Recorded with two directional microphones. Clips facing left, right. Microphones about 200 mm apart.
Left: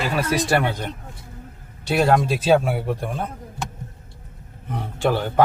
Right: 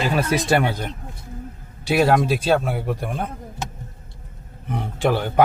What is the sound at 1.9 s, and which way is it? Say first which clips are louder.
Speech: right 1 dB; 5° right (ahead or behind).